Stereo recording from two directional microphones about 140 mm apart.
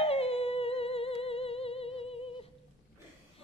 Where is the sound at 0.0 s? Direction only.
45° left (ahead or behind).